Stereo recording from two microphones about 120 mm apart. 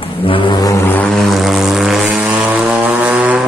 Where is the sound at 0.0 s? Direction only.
50° left (ahead or behind).